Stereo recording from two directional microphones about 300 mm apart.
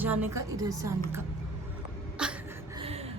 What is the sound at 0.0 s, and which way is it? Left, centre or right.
A woman's voice, centre.